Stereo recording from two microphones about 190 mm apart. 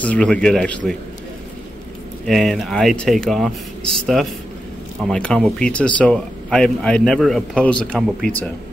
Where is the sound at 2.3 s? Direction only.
Centre (ahead or behind).